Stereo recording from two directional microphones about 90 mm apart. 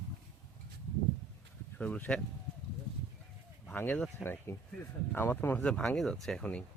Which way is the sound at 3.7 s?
15° left (ahead or behind).